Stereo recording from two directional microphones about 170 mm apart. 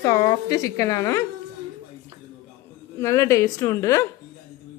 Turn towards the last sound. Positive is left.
turn(degrees=20)  # may be behind; listen again after turning